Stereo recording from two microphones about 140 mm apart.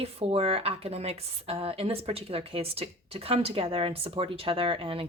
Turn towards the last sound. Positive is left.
turn(degrees=-40)  # may be behind; listen again after turning